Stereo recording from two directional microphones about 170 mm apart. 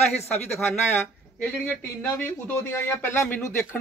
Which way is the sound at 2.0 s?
15° left (ahead or behind).